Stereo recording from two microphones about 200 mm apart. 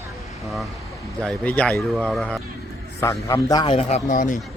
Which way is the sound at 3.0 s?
15° left (ahead or behind).